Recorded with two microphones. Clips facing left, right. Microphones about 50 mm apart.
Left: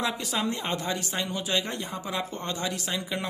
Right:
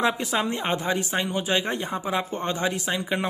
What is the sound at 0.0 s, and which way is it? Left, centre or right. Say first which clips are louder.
Speech: right 5 dB; right.